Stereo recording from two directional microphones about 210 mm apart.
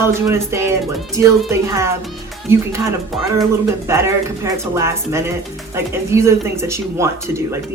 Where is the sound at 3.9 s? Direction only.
15° right (ahead or behind).